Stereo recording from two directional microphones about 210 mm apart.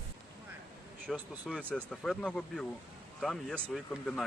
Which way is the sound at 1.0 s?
Centre (ahead or behind).